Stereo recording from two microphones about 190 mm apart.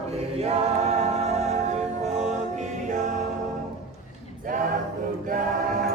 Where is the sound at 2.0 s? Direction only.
35° right (ahead or behind).